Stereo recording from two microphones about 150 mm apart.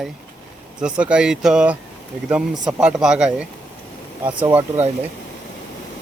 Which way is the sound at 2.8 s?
5° right (ahead or behind).